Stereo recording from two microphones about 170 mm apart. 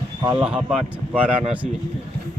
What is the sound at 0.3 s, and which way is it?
Speech, 5° right (ahead or behind).